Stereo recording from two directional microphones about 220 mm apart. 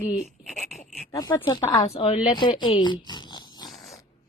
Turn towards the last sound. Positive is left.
turn(degrees=0)  # may be behind; listen again after turning